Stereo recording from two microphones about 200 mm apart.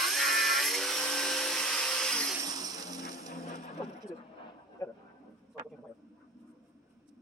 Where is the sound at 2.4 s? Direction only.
20° right (ahead or behind).